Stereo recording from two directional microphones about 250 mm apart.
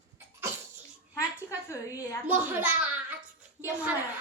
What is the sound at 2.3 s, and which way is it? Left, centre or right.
Speech, centre.